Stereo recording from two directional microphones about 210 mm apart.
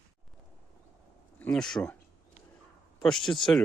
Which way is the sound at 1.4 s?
5° left (ahead or behind).